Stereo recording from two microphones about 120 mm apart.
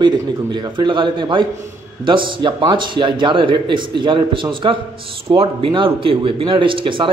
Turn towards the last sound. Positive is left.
turn(degrees=-45)  # may be behind; listen again after turning